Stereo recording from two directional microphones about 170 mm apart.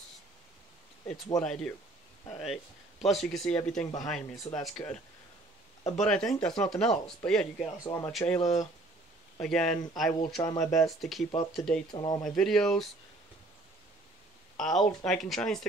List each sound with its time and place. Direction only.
1.0 s speech: centre (ahead or behind)
5.9 s speech: 5° left (ahead or behind)
7.8 s speech: 15° left (ahead or behind)
8.1 s speech: centre (ahead or behind)
11.9 s speech: 25° left (ahead or behind)
12.2 s speech: 5° left (ahead or behind)
14.6 s speech: centre (ahead or behind)